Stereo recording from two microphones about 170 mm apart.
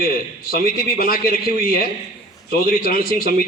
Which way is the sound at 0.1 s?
55° left (ahead or behind).